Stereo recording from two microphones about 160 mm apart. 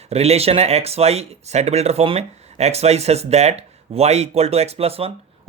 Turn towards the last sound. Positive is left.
turn(degrees=-40)  # may be behind; listen again after turning